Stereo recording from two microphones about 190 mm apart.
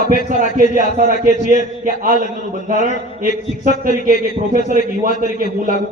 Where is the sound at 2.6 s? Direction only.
40° right (ahead or behind).